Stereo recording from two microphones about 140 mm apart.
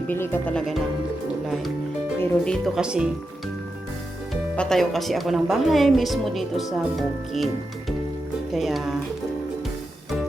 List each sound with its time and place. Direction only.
0.1 s speech: 15° left (ahead or behind)
2.1 s a woman's voice: 5° left (ahead or behind)
4.5 s a woman's voice: 5° left (ahead or behind)